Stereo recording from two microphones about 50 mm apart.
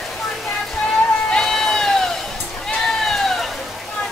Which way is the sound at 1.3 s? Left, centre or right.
Centre.